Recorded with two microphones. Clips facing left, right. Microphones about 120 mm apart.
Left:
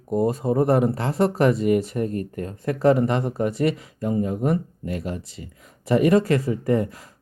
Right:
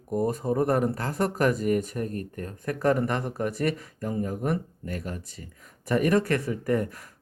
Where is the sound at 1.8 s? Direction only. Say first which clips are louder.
Left 6 dB; 45° right (ahead or behind).